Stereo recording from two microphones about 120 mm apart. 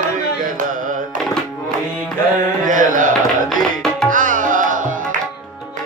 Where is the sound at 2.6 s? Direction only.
90° right.